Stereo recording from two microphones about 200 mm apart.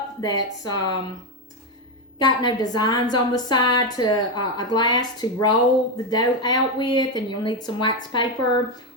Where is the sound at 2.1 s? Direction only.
20° left (ahead or behind).